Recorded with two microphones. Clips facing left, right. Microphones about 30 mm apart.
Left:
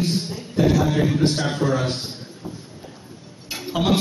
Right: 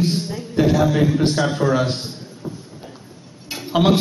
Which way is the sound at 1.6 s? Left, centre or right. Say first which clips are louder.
Right 3 dB; centre.